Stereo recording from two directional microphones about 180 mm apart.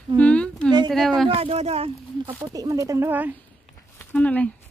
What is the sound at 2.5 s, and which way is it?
Speech, 20° right (ahead or behind).